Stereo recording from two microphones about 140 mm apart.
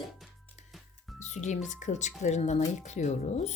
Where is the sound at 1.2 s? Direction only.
55° left (ahead or behind).